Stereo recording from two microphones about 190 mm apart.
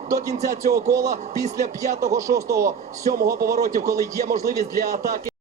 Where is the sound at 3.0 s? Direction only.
55° right (ahead or behind).